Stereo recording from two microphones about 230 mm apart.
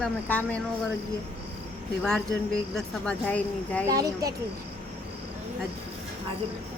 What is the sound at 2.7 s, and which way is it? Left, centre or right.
Speech, centre.